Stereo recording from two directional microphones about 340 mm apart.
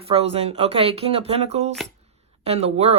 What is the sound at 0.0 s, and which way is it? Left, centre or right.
Speech, centre.